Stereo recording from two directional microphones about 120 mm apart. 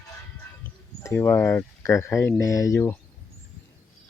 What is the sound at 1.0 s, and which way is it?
Speech, 20° left (ahead or behind).